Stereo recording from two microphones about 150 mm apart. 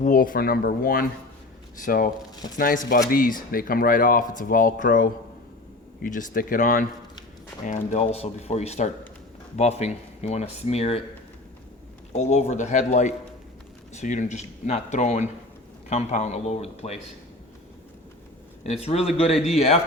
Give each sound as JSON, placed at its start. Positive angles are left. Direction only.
{"t": 0.0, "sound": "speech", "side_deg": 70}
{"t": 7.6, "sound": "speech", "side_deg": 50}
{"t": 12.1, "sound": "speech", "side_deg": 50}
{"t": 18.6, "sound": "speech", "side_deg": 45}